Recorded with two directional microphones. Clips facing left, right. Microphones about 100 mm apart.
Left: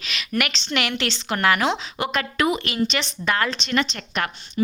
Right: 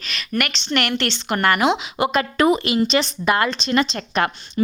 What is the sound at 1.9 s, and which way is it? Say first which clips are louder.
Speech: right 5 dB; 25° right (ahead or behind).